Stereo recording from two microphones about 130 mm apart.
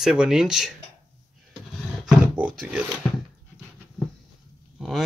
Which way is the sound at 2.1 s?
10° right (ahead or behind).